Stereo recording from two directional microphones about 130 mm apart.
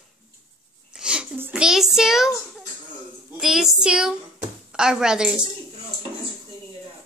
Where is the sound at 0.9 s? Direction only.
5° right (ahead or behind).